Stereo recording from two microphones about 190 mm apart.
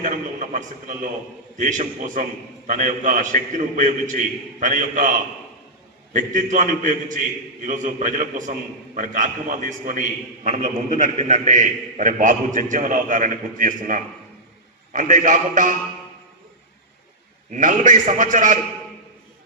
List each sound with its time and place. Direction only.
0.0 s a man's voice: 40° right (ahead or behind)
6.1 s a man's voice: 45° right (ahead or behind)
17.5 s a man's voice: 45° right (ahead or behind)